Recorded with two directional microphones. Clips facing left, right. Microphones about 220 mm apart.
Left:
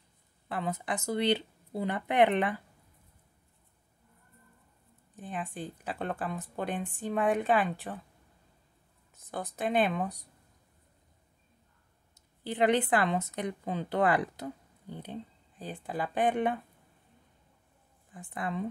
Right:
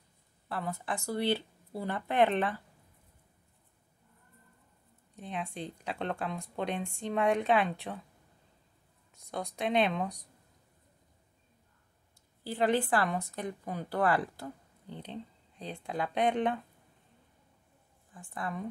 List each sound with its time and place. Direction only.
0.5 s speech: 20° left (ahead or behind)
5.1 s speech: centre (ahead or behind)
9.1 s speech: 5° left (ahead or behind)
12.4 s a woman's voice: 20° left (ahead or behind)
15.0 s speech: 5° left (ahead or behind)
18.1 s a woman's voice: 20° left (ahead or behind)